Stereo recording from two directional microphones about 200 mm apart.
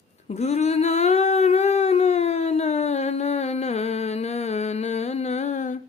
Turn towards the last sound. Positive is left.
turn(degrees=35)  # may be behind; listen again after turning